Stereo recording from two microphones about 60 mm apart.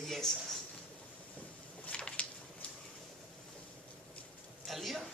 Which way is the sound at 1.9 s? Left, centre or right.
Centre.